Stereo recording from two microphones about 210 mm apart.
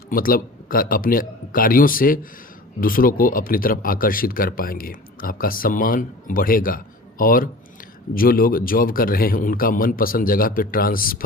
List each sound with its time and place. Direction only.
0.1 s speech: 40° left (ahead or behind)